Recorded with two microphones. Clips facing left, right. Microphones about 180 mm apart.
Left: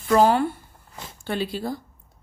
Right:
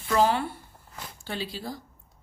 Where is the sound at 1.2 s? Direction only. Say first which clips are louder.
Left 7 dB; 55° left (ahead or behind).